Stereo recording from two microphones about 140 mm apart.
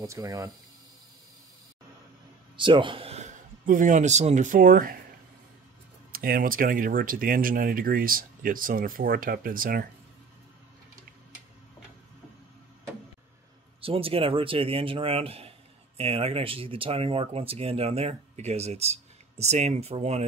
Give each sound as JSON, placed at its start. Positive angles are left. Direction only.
{"t": 0.0, "sound": "speech", "side_deg": -20}
{"t": 2.5, "sound": "a man's voice", "side_deg": -35}
{"t": 6.1, "sound": "speech", "side_deg": -90}
{"t": 13.7, "sound": "speech", "side_deg": -40}